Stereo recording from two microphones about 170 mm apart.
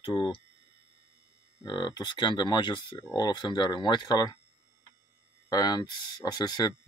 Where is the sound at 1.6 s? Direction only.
25° left (ahead or behind).